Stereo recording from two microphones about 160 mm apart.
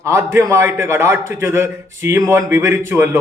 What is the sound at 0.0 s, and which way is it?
A man's voice, 20° right (ahead or behind).